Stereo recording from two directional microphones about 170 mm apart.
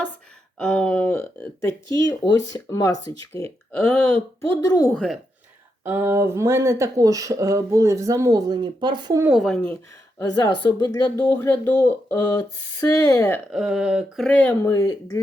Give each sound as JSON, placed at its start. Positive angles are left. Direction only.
{"t": 0.6, "sound": "speech", "side_deg": 5}
{"t": 3.7, "sound": "speech", "side_deg": 10}
{"t": 5.8, "sound": "speech", "side_deg": -10}
{"t": 9.2, "sound": "speech", "side_deg": 0}
{"t": 10.2, "sound": "speech", "side_deg": 20}
{"t": 11.2, "sound": "speech", "side_deg": 10}
{"t": 13.5, "sound": "speech", "side_deg": 0}